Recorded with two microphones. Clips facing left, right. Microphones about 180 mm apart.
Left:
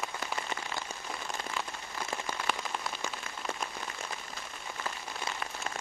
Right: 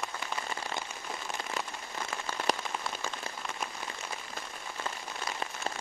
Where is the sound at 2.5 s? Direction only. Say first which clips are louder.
Right 5 dB; 40° right (ahead or behind).